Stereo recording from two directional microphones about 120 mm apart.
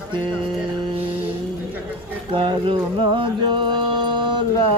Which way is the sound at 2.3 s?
45° right (ahead or behind).